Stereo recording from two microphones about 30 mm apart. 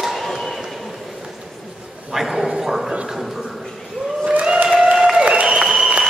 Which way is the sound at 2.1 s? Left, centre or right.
Centre.